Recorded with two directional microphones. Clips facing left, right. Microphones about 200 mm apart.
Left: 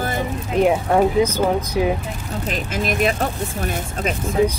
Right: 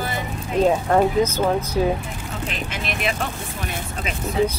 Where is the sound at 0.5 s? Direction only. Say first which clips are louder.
Left 1 dB; 10° left (ahead or behind).